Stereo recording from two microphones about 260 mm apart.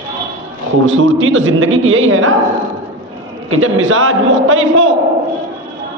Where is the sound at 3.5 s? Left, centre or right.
Right.